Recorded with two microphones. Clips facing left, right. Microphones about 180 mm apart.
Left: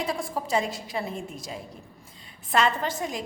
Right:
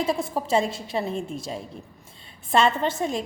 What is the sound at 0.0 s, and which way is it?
A woman's voice, 25° right (ahead or behind).